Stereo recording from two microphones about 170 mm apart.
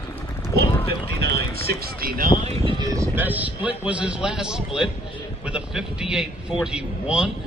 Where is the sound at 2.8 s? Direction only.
20° right (ahead or behind).